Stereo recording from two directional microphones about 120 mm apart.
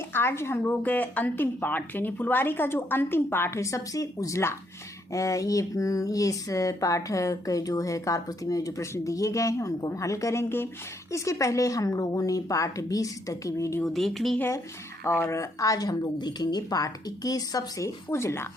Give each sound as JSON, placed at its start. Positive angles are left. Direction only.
{"t": 0.1, "sound": "speech", "side_deg": 20}
{"t": 13.8, "sound": "speech", "side_deg": 0}
{"t": 14.3, "sound": "speech", "side_deg": 20}